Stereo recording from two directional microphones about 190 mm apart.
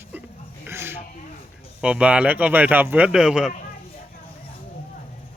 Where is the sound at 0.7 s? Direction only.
10° right (ahead or behind).